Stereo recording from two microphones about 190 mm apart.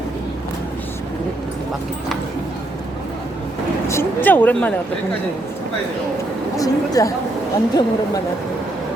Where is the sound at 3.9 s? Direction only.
10° left (ahead or behind).